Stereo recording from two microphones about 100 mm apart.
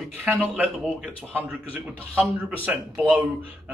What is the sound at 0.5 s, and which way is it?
Speech, 15° right (ahead or behind).